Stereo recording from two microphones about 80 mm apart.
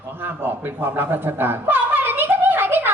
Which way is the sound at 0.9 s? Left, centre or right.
Right.